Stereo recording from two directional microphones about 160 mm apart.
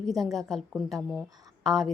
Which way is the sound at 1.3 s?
25° right (ahead or behind).